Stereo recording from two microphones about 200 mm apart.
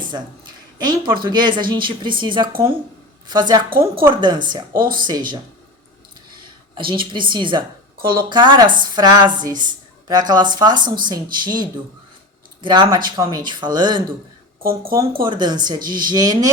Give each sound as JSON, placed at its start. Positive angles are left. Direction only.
{"t": 0.8, "sound": "a woman's voice", "side_deg": -20}
{"t": 4.7, "sound": "speech", "side_deg": -45}
{"t": 4.9, "sound": "a woman's voice", "side_deg": -20}
{"t": 6.7, "sound": "a woman's voice", "side_deg": -25}
{"t": 14.6, "sound": "speech", "side_deg": -45}
{"t": 15.2, "sound": "a woman's voice", "side_deg": -25}